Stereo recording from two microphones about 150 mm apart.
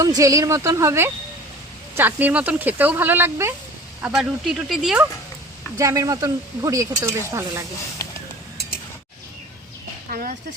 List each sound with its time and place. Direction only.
0.0 s speech: 25° right (ahead or behind)
4.0 s speech: 5° right (ahead or behind)
5.7 s speech: 20° right (ahead or behind)
10.1 s speech: 70° right (ahead or behind)